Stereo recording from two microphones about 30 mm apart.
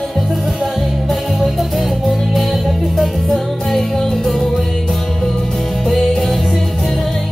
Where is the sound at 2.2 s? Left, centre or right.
Centre.